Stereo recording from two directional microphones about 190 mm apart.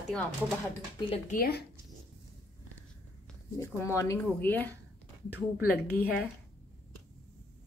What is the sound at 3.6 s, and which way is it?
Speech, 15° left (ahead or behind).